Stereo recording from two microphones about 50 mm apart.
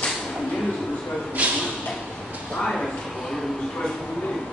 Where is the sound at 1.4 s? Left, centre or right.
Right.